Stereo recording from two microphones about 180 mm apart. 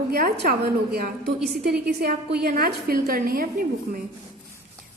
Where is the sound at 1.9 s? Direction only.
60° right (ahead or behind).